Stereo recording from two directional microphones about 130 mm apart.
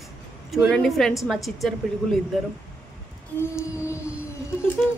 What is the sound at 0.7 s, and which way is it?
A woman's voice, centre (ahead or behind).